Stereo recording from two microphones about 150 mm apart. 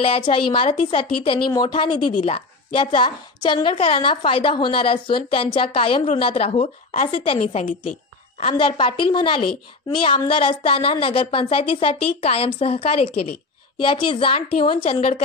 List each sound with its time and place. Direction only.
0.0 s a woman's voice: 35° left (ahead or behind)
7.3 s a woman's voice: 50° left (ahead or behind)